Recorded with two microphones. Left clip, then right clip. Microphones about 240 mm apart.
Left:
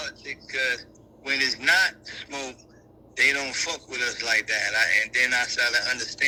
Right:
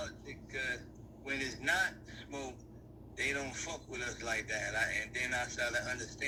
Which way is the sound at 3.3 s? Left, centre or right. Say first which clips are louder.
Left 12 dB; left.